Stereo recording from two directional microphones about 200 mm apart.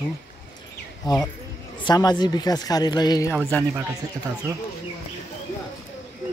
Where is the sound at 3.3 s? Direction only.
15° right (ahead or behind).